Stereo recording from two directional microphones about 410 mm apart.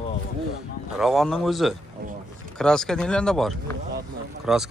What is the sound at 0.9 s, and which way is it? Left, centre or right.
A man's voice, centre.